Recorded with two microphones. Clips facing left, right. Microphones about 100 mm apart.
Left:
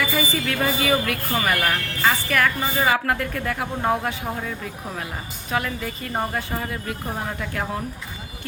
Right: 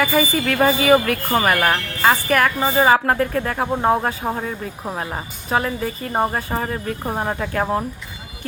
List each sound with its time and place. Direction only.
0.0 s a woman's voice: 50° right (ahead or behind)
2.6 s speech: 35° right (ahead or behind)